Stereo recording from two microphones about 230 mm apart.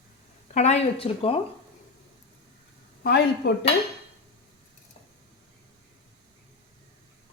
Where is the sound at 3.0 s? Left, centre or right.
Left.